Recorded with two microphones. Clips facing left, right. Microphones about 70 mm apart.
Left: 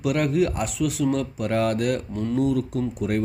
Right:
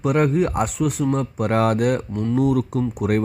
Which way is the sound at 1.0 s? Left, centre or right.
Right.